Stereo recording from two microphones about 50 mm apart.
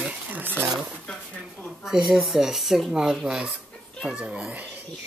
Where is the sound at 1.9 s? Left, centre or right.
Centre.